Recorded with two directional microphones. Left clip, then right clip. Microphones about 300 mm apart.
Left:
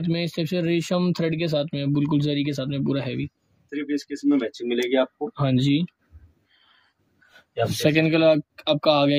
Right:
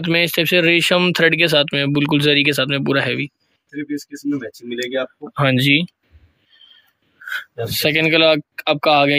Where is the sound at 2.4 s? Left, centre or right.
Centre.